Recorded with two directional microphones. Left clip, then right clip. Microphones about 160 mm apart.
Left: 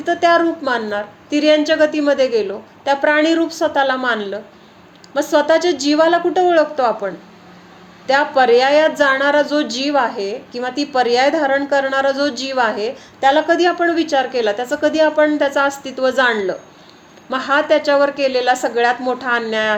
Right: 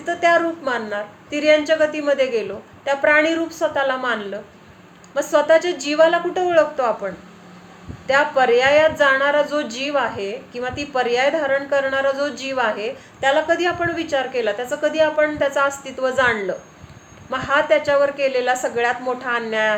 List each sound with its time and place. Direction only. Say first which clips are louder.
0.0 s a woman's voice: left 3 dB; 35° left (ahead or behind)